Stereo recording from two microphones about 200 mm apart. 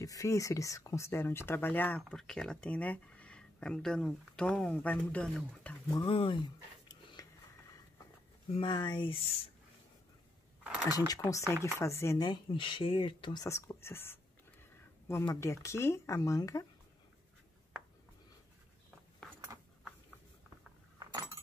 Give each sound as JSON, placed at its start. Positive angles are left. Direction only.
{"t": 0.0, "sound": "speech", "side_deg": 15}
{"t": 5.9, "sound": "speech", "side_deg": 25}
{"t": 8.5, "sound": "speech", "side_deg": 20}
{"t": 10.6, "sound": "cutlery", "side_deg": -5}
{"t": 10.9, "sound": "speech", "side_deg": 20}